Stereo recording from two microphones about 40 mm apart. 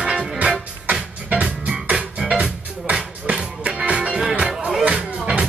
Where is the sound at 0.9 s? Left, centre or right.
Right.